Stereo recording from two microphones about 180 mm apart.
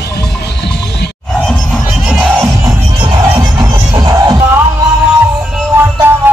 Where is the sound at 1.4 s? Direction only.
5° left (ahead or behind).